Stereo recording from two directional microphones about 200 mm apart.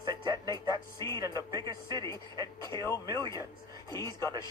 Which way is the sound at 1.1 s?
15° left (ahead or behind).